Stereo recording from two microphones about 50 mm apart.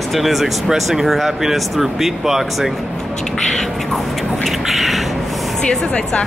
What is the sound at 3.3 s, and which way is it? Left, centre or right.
Speech, centre.